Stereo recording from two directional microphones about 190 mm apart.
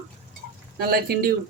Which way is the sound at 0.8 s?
50° right (ahead or behind).